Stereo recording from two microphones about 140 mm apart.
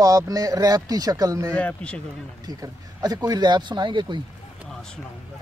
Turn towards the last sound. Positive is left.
turn(degrees=-35)  # may be behind; listen again after turning